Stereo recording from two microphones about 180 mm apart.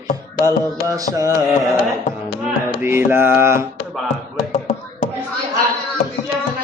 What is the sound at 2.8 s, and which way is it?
Mantra, 10° right (ahead or behind).